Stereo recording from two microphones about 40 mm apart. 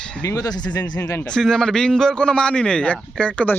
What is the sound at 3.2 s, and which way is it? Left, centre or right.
Speech, left.